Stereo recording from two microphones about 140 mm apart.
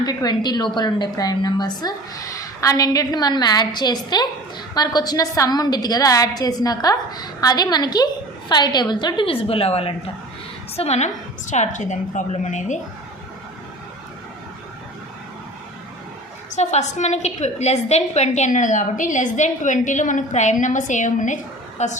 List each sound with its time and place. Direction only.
0.0 s a woman's voice: 30° left (ahead or behind); by 12.8 s 60° left (ahead or behind)
16.6 s a woman's voice: 55° left (ahead or behind)